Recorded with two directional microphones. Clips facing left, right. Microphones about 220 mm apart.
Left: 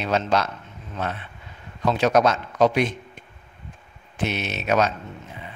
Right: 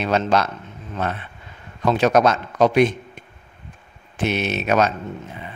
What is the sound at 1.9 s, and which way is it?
A man's voice, 55° right (ahead or behind).